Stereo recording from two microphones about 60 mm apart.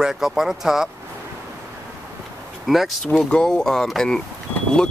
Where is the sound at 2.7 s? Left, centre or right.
Centre.